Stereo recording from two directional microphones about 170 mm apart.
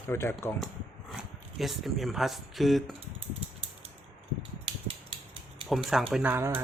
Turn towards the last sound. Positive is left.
turn(degrees=-15)  # may be behind; listen again after turning